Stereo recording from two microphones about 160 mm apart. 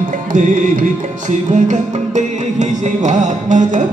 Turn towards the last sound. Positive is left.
turn(degrees=-50)  # may be behind; listen again after turning